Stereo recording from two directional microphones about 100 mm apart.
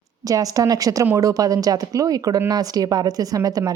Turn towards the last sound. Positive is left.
turn(degrees=-40)  # may be behind; listen again after turning